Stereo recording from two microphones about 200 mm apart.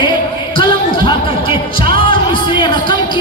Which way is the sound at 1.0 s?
25° left (ahead or behind).